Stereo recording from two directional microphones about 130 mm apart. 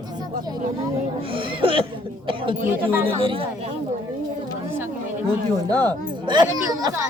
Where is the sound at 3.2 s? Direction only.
45° right (ahead or behind).